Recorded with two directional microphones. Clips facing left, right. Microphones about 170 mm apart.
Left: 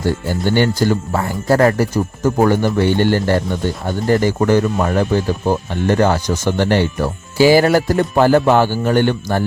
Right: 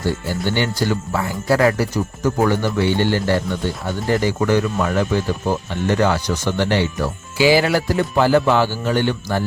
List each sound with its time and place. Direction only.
0.3 s speech: 45° left (ahead or behind)